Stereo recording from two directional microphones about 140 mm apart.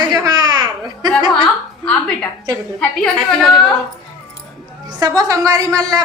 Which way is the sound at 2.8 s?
5° left (ahead or behind).